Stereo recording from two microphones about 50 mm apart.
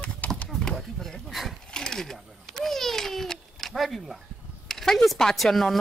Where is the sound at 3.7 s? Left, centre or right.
Centre.